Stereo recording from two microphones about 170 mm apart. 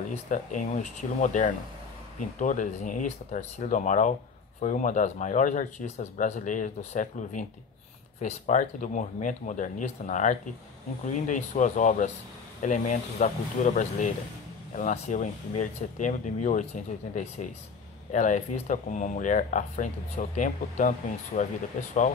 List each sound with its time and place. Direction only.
0.1 s speech: 45° left (ahead or behind)